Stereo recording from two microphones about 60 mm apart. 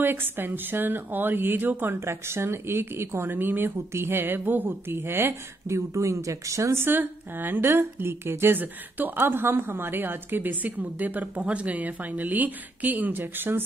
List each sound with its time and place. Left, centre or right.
0.0 s a woman's voice: right
2.0 s a woman's voice: right
5.8 s speech: right
6.8 s a woman's voice: right